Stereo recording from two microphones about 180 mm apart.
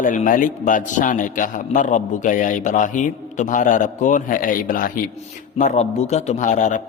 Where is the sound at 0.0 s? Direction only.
45° left (ahead or behind).